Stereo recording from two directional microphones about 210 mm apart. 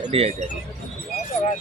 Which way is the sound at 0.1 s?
30° right (ahead or behind).